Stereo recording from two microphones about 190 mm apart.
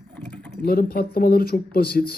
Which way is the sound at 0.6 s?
50° left (ahead or behind).